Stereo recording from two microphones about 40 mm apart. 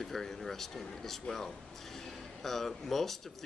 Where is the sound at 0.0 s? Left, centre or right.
Centre.